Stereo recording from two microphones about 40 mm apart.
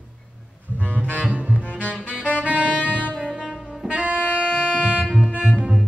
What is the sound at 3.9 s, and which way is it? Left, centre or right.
Saxophone, right.